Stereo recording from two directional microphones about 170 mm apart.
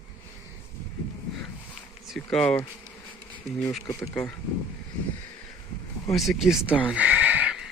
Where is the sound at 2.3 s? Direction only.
5° left (ahead or behind).